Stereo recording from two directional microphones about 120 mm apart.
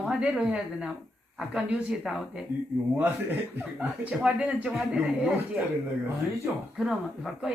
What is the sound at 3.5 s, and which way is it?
A man's voice, 10° right (ahead or behind).